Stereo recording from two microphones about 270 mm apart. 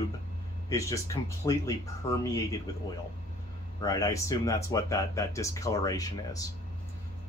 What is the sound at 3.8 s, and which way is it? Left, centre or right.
Speech, centre.